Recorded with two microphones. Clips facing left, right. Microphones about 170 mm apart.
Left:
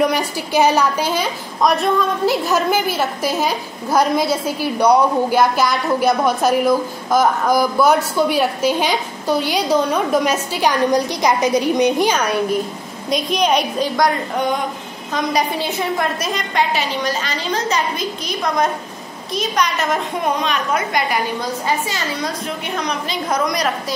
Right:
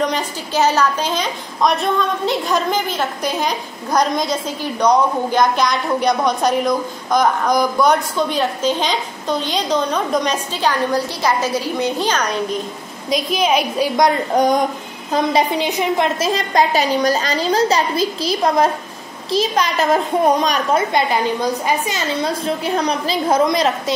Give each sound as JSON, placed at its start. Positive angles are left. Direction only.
{"t": 0.0, "sound": "a woman's voice", "side_deg": 10}
{"t": 13.1, "sound": "a woman's voice", "side_deg": -5}
{"t": 14.3, "sound": "a woman's voice", "side_deg": -40}
{"t": 15.5, "sound": "a woman's voice", "side_deg": -15}
{"t": 22.8, "sound": "a woman's voice", "side_deg": -35}